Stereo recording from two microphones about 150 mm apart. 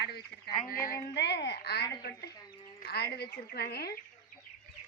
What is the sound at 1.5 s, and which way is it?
A woman's voice, 90° left.